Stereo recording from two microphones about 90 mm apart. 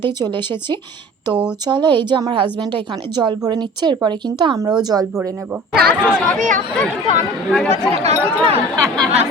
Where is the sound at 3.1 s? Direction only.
50° right (ahead or behind).